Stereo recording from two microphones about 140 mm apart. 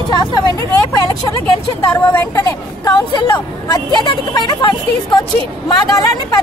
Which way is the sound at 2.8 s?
30° left (ahead or behind).